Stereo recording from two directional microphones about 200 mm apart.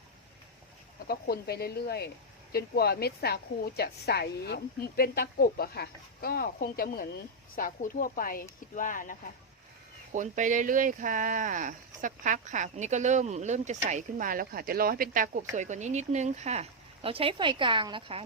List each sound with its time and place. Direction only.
1.0 s a woman's voice: 50° left (ahead or behind)
10.1 s speech: 40° right (ahead or behind)